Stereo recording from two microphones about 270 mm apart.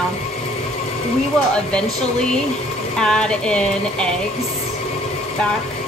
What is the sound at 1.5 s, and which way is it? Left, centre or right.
Speech, centre.